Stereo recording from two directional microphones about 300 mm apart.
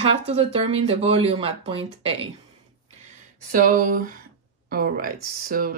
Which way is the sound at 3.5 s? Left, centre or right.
Right.